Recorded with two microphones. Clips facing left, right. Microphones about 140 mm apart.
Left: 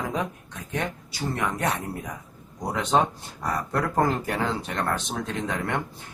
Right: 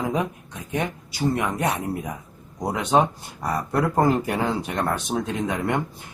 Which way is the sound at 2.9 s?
10° right (ahead or behind).